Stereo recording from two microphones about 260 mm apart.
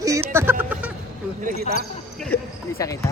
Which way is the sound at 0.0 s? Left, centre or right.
Centre.